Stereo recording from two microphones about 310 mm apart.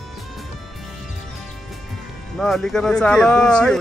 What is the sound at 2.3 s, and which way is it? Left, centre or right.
Speech, centre.